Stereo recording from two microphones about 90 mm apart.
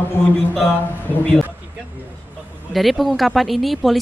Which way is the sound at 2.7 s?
Centre (ahead or behind).